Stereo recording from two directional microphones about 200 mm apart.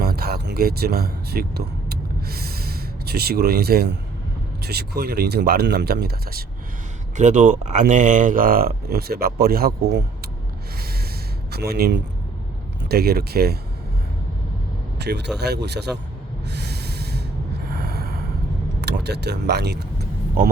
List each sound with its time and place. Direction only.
0.0 s music: 50° right (ahead or behind)
4.6 s speech: 50° right (ahead or behind)
7.2 s speech: 40° right (ahead or behind)
11.5 s speech: 50° right (ahead or behind)
14.9 s speech: 55° right (ahead or behind)
16.5 s snort: 55° right (ahead or behind)
17.7 s a sound: 50° right (ahead or behind)
18.8 s speech: 55° right (ahead or behind)